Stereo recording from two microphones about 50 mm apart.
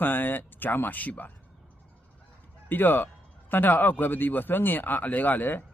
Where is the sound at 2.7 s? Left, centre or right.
Left.